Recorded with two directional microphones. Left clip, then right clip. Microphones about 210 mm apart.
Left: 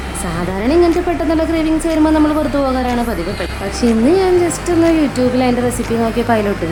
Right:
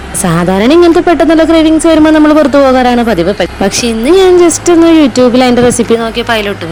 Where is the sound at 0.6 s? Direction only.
40° right (ahead or behind).